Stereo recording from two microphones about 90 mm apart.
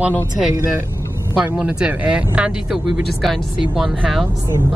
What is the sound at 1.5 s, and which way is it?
Speech, 10° right (ahead or behind).